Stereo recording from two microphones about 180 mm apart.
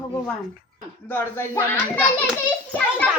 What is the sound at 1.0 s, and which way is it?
Speech, 15° left (ahead or behind).